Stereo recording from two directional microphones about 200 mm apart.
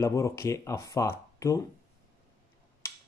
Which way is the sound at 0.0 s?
15° left (ahead or behind).